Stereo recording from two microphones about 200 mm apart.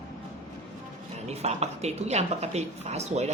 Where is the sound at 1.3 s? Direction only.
35° right (ahead or behind).